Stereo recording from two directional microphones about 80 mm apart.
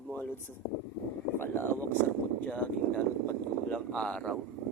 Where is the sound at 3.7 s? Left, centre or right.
Centre.